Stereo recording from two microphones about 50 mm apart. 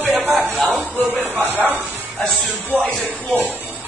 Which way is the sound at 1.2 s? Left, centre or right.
Right.